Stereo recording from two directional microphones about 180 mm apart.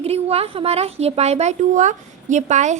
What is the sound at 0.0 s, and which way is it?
A woman's voice, 35° right (ahead or behind).